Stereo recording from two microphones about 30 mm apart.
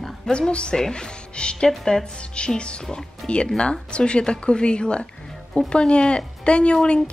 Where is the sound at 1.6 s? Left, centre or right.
Left.